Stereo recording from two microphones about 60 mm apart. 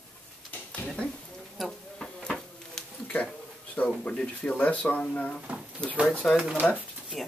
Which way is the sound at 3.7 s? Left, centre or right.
Left.